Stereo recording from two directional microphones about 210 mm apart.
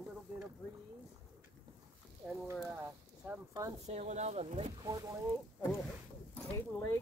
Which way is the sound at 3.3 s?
15° right (ahead or behind).